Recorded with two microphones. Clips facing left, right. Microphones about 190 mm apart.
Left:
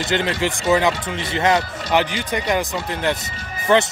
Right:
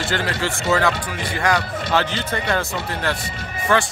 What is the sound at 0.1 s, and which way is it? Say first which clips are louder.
Speech: left 5 dB; 20° left (ahead or behind).